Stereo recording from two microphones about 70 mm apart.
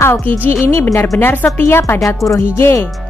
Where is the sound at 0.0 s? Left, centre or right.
Left.